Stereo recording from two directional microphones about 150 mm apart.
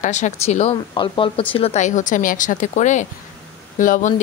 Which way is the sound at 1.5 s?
45° left (ahead or behind).